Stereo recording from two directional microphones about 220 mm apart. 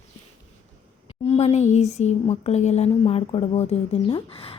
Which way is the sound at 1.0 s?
25° left (ahead or behind).